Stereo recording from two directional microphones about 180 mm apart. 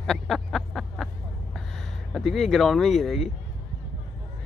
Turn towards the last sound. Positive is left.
turn(degrees=0)  # may be behind; listen again after turning